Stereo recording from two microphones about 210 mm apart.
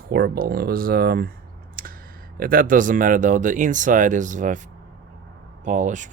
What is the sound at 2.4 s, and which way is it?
Speech, 45° right (ahead or behind).